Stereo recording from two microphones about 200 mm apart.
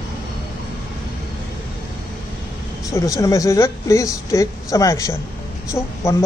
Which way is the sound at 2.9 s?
15° left (ahead or behind).